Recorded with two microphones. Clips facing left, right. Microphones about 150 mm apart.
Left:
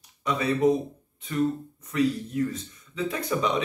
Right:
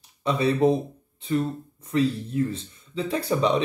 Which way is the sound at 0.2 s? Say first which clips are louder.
Right 2 dB; 30° right (ahead or behind).